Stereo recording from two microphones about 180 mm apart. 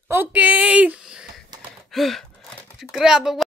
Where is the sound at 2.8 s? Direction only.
Centre (ahead or behind).